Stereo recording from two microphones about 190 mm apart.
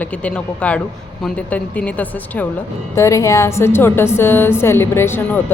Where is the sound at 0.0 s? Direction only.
5° left (ahead or behind).